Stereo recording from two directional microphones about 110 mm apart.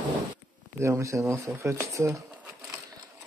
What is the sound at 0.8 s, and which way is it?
Speech, 25° right (ahead or behind).